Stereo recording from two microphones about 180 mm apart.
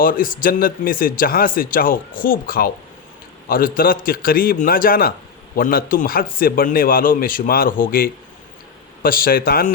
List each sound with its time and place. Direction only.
0.0 s speech: 50° left (ahead or behind)